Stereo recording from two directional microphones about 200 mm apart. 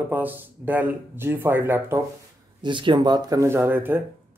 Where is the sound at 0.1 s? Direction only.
10° right (ahead or behind).